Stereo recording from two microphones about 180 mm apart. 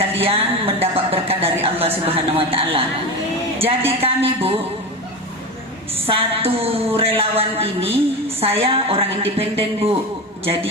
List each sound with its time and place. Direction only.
0.2 s a sound: 30° right (ahead or behind)
1.6 s speech: 30° right (ahead or behind)
6.1 s speech: 30° right (ahead or behind)